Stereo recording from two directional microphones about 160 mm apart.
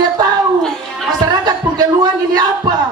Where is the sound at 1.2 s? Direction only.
25° right (ahead or behind).